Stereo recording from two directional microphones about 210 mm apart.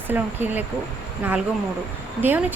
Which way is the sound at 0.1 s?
10° right (ahead or behind).